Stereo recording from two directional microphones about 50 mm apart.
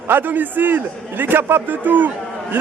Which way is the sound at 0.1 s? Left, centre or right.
Right.